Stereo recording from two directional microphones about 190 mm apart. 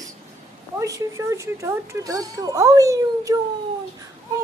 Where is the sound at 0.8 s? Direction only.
15° right (ahead or behind).